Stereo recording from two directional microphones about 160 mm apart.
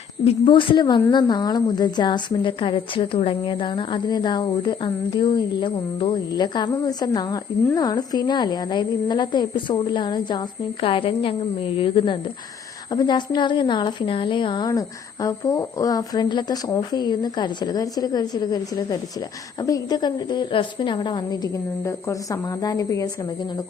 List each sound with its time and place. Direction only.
0.3 s a woman's voice: 30° left (ahead or behind)